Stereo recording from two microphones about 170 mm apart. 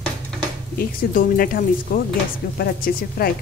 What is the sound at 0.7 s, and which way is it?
Speech, 55° left (ahead or behind).